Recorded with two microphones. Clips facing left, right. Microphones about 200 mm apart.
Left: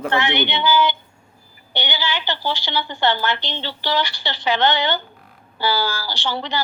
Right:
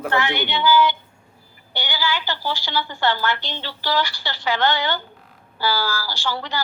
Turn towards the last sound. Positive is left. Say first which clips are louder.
# left 2 dB
turn(degrees=20)  # may be behind; listen again after turning